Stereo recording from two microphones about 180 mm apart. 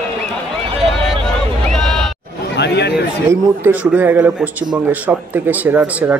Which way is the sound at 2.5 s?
70° left (ahead or behind).